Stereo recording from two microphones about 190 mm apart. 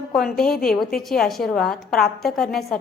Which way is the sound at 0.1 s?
Centre (ahead or behind).